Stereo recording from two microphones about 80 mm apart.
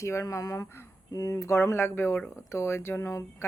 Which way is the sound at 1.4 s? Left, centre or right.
Left.